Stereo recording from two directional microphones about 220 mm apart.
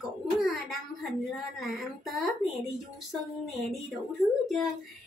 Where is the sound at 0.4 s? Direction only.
Centre (ahead or behind).